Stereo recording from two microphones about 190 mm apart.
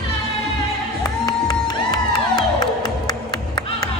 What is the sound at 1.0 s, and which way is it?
Crowd, 20° left (ahead or behind).